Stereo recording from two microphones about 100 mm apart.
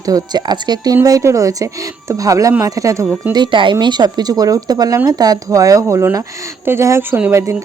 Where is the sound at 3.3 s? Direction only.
50° right (ahead or behind).